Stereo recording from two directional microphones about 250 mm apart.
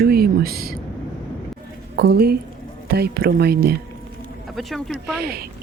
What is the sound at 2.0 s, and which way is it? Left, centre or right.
A man's voice, right.